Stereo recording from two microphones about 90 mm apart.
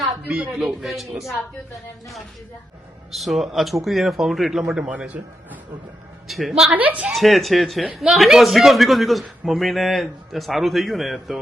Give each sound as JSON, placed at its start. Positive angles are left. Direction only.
{"t": 0.6, "sound": "a man's voice", "side_deg": 0}
{"t": 3.1, "sound": "a man's voice", "side_deg": 0}
{"t": 6.2, "sound": "a man's voice", "side_deg": 0}
{"t": 6.7, "sound": "a woman's voice", "side_deg": -15}
{"t": 7.1, "sound": "a man's voice", "side_deg": 0}